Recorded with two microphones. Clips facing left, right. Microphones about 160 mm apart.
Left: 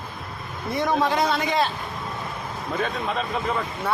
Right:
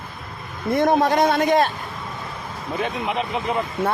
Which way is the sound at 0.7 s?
50° right (ahead or behind).